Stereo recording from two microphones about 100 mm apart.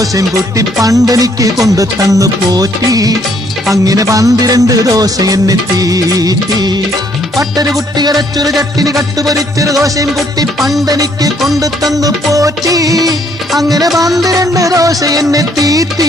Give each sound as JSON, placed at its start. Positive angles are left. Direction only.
{"t": 0.0, "sound": "music", "side_deg": -35}
{"t": 10.1, "sound": "music", "side_deg": 0}
{"t": 10.9, "sound": "music", "side_deg": -35}